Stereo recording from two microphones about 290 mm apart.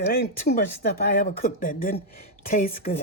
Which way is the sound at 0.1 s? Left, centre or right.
Left.